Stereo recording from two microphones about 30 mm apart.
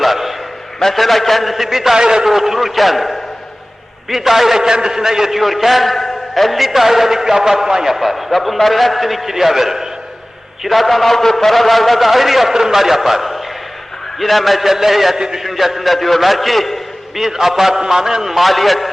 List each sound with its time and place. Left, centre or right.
0.0 s a sound: centre
0.8 s a man's voice: centre
2.0 s a man's voice: right
2.2 s a man's voice: centre
5.4 s a man's voice: centre
7.9 s a man's voice: centre
10.6 s a man's voice: centre
17.2 s a man's voice: centre
18.4 s a man's voice: centre